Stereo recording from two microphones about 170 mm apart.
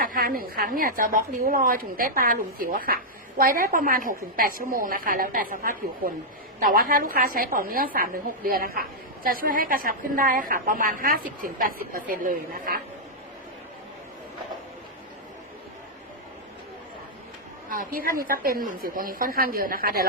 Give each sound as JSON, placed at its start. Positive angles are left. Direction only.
{"t": 0.0, "sound": "a woman's voice", "side_deg": -55}
{"t": 17.7, "sound": "a woman's voice", "side_deg": -55}